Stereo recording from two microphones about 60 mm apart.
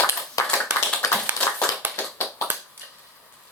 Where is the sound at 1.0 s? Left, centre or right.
Left.